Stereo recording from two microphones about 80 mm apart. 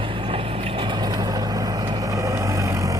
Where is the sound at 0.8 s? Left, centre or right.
Right.